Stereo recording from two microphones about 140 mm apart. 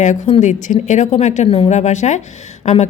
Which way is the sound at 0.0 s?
60° left (ahead or behind).